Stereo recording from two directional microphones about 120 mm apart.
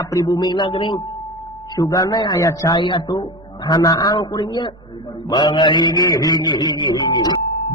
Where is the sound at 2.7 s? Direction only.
40° left (ahead or behind).